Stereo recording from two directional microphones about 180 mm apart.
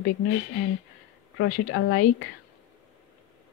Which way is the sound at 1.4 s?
85° left.